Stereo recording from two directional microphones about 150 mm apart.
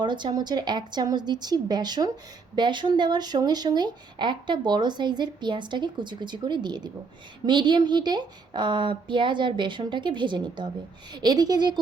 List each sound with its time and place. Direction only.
0.0 s a woman's voice: 30° right (ahead or behind)